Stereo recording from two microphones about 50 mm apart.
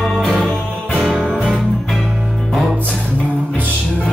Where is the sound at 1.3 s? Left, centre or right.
Centre.